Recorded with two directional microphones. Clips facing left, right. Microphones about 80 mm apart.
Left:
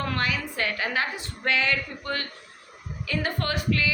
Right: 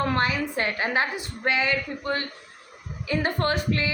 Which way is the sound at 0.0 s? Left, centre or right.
Right.